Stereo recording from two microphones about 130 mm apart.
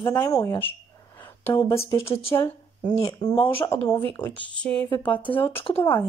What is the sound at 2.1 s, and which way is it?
Speech, 45° left (ahead or behind).